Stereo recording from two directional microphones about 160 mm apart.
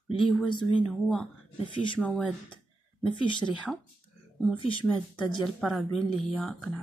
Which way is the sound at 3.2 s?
30° left (ahead or behind).